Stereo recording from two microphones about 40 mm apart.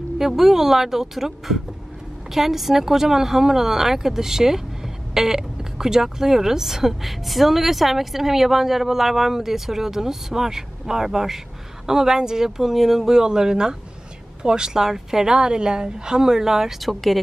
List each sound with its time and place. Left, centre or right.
0.2 s speech: centre
16.8 s speech: centre